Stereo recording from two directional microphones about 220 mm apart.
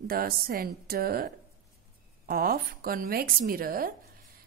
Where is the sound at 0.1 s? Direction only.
40° right (ahead or behind).